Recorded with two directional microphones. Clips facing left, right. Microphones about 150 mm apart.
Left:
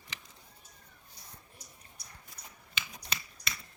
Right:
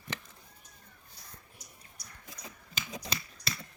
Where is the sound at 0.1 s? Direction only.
55° right (ahead or behind).